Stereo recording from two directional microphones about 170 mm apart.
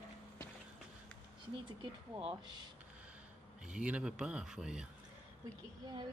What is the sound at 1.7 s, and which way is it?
Speech, 25° right (ahead or behind).